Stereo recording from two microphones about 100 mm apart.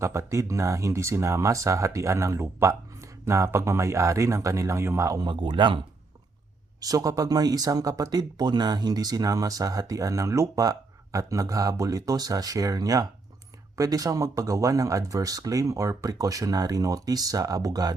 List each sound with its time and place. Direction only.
0.0 s speech: 30° right (ahead or behind)
5.2 s speech: 55° right (ahead or behind)
6.7 s speech: 40° right (ahead or behind)